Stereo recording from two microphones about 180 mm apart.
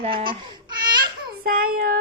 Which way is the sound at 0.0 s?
30° right (ahead or behind).